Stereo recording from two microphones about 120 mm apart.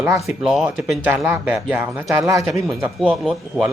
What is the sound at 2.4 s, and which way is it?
A man's voice, centre (ahead or behind).